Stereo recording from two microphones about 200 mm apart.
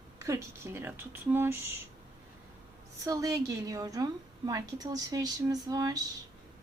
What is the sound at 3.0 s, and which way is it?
A woman's voice, 15° right (ahead or behind).